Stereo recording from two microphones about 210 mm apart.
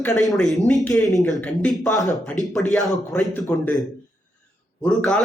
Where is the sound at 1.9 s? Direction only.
15° left (ahead or behind).